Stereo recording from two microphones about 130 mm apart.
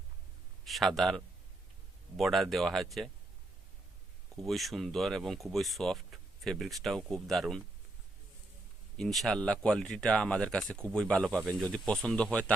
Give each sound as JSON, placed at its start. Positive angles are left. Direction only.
{"t": 0.6, "sound": "a man's voice", "side_deg": 0}
{"t": 4.4, "sound": "speech", "side_deg": 0}
{"t": 9.0, "sound": "speech", "side_deg": 0}